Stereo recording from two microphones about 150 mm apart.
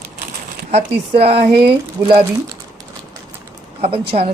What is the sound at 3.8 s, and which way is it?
Speech, 40° right (ahead or behind).